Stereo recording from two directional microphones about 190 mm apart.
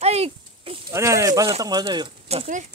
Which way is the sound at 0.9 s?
15° right (ahead or behind).